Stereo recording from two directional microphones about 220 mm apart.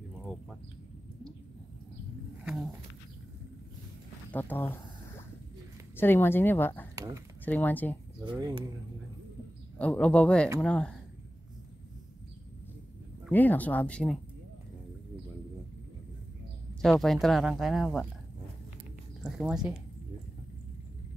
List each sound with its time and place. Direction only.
2.4 s dog: centre (ahead or behind)
4.3 s speech: 10° left (ahead or behind)
5.9 s speech: 10° left (ahead or behind)
8.2 s speech: 20° right (ahead or behind)
9.8 s speech: 5° left (ahead or behind)
13.3 s speech: 10° left (ahead or behind)
16.8 s speech: centre (ahead or behind)
19.2 s speech: centre (ahead or behind)